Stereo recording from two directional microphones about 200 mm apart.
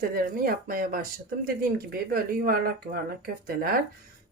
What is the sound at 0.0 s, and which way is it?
Speech, 45° right (ahead or behind).